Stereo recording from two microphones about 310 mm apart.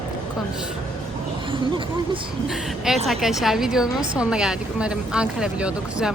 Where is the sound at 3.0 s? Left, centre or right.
Centre.